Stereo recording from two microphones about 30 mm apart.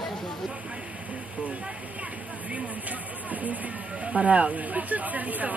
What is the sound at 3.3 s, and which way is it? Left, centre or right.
Speech, right.